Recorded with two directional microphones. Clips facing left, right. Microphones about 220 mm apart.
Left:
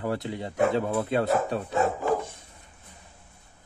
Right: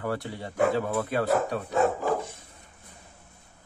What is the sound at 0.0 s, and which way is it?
Speech, 20° left (ahead or behind).